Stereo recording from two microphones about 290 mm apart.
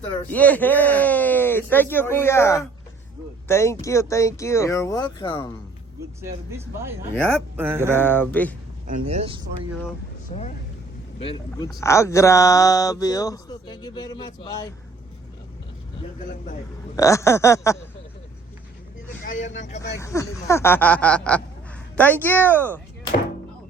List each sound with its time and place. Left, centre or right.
0.3 s speech: centre
6.2 s speech: centre
7.9 s speech: centre
9.0 s speech: centre
10.3 s speech: left
16.9 s speech: centre
19.2 s speech: left
19.8 s speech: centre